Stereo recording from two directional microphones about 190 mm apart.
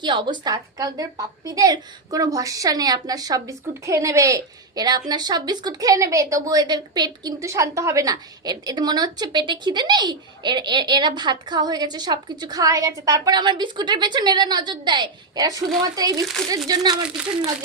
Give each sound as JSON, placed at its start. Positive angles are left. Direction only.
{"t": 0.0, "sound": "a woman's voice", "side_deg": -25}